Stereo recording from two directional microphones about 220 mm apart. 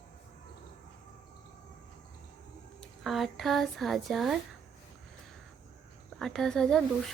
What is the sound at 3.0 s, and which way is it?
A woman's voice, centre (ahead or behind).